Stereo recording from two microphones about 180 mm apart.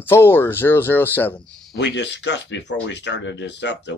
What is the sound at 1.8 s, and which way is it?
Speech, 75° left (ahead or behind).